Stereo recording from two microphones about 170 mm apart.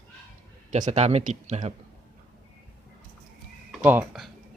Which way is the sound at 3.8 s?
10° right (ahead or behind).